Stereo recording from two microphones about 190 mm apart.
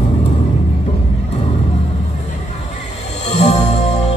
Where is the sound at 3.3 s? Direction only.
35° left (ahead or behind).